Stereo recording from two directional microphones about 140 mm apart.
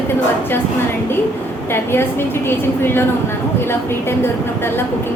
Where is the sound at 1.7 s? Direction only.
15° left (ahead or behind).